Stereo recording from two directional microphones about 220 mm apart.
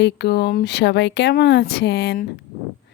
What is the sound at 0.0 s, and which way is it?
Speech, 50° left (ahead or behind).